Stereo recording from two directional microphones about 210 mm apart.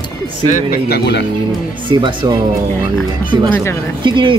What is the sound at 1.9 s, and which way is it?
Speech, 20° right (ahead or behind).